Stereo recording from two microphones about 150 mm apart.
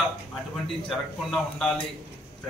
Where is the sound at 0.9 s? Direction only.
5° left (ahead or behind).